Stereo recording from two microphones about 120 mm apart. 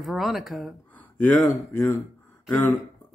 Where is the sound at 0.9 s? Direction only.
15° left (ahead or behind).